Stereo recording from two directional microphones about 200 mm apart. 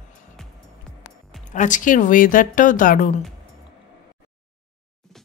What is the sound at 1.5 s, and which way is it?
Speech, 40° left (ahead or behind).